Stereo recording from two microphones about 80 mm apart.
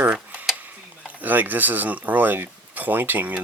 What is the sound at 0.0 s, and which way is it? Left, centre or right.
Tick-tock, centre.